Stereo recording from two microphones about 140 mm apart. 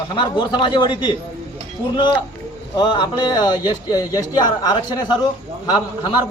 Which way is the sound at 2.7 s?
35° left (ahead or behind).